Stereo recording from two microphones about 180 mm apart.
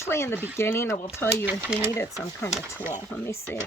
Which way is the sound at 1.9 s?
15° left (ahead or behind).